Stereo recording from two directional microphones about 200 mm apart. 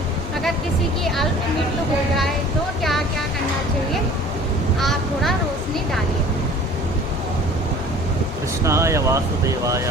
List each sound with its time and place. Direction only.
1.0 s speech: centre (ahead or behind)
4.8 s speech: centre (ahead or behind)
8.6 s speech: 15° right (ahead or behind)